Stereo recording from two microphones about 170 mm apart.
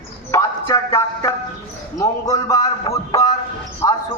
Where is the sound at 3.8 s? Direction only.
15° left (ahead or behind).